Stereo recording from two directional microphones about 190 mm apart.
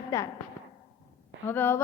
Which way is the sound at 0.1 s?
15° left (ahead or behind).